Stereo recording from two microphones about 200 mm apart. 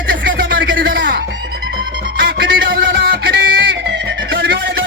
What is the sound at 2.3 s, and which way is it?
Music, 55° right (ahead or behind).